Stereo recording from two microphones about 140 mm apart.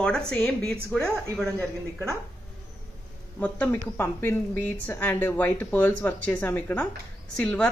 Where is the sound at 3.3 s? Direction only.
10° left (ahead or behind).